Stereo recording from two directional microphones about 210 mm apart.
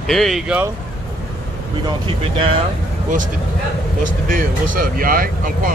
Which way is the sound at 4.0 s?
40° right (ahead or behind).